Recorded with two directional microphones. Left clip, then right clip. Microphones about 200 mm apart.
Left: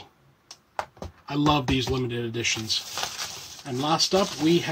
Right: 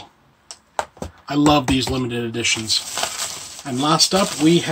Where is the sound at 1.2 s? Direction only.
Centre (ahead or behind).